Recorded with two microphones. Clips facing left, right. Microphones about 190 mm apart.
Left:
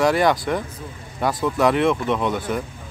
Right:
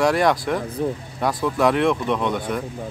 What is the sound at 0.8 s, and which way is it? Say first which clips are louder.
Speech: right 13 dB; 70° right (ahead or behind).